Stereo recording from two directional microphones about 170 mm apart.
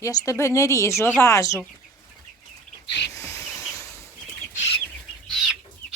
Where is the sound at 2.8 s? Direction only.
90° left.